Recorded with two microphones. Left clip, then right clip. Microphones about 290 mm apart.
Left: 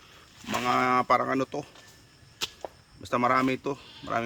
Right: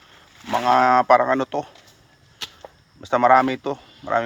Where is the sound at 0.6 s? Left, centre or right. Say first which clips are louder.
Right 9 dB; centre.